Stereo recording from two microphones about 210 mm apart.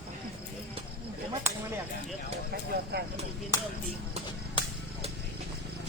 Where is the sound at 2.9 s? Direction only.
50° right (ahead or behind).